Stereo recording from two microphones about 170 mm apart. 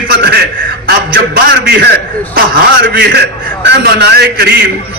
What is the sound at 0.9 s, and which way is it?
A man's voice, 65° right (ahead or behind).